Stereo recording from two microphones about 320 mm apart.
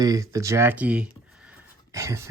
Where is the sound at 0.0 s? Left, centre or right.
Centre.